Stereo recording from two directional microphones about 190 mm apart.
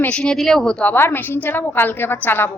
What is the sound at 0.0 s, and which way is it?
A woman's voice, 5° left (ahead or behind).